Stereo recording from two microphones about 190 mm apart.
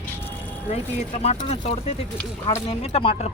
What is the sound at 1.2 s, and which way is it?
Speech, 35° left (ahead or behind).